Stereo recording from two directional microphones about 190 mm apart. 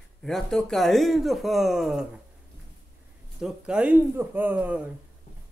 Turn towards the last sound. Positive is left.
turn(degrees=-10)  # may be behind; listen again after turning